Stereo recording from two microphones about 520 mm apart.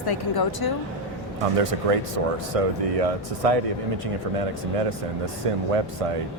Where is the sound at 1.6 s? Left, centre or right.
Right.